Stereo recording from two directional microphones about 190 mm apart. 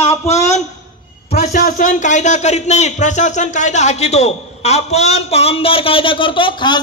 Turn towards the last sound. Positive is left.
turn(degrees=25)  # may be behind; listen again after turning